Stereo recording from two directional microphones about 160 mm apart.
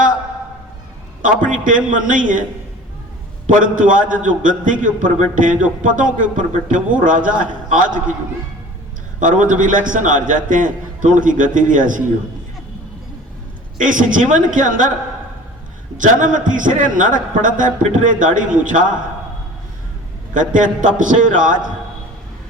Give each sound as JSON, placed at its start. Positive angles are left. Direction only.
{"t": 1.2, "sound": "a man's voice", "side_deg": -55}
{"t": 3.4, "sound": "a man's voice", "side_deg": -55}
{"t": 9.5, "sound": "a man's voice", "side_deg": -55}
{"t": 13.7, "sound": "a man's voice", "side_deg": -55}
{"t": 16.0, "sound": "a man's voice", "side_deg": -55}
{"t": 20.3, "sound": "a man's voice", "side_deg": -55}